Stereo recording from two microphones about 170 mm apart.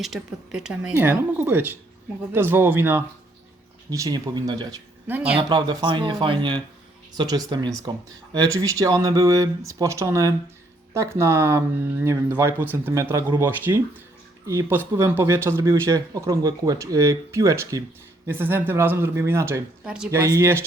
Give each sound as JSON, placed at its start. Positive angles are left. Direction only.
{"t": 0.0, "sound": "speech", "side_deg": 0}
{"t": 5.0, "sound": "speech", "side_deg": -10}
{"t": 5.4, "sound": "speech", "side_deg": -25}
{"t": 19.8, "sound": "speech", "side_deg": -5}
{"t": 20.1, "sound": "speech", "side_deg": -20}